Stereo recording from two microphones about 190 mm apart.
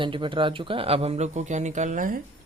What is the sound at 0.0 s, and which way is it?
Speech, 25° right (ahead or behind).